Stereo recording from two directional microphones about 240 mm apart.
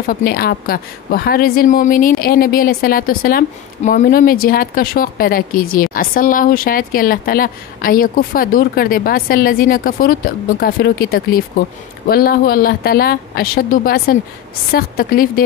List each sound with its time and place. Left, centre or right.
0.0 s a woman's voice: left